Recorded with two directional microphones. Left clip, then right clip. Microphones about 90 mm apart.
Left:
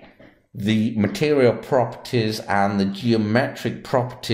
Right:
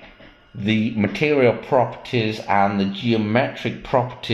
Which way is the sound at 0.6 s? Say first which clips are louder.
Right 1 dB; 35° left (ahead or behind).